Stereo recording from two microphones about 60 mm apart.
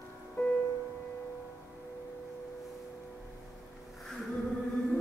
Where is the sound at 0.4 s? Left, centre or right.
Left.